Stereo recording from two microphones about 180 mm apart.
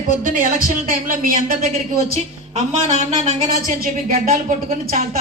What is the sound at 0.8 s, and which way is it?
Speech, 50° right (ahead or behind).